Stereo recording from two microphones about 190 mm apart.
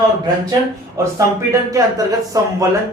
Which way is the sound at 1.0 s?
15° right (ahead or behind).